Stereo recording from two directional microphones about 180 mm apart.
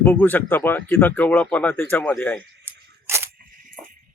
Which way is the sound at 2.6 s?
15° right (ahead or behind).